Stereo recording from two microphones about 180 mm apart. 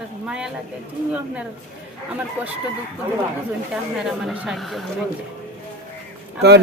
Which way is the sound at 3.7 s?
5° right (ahead or behind).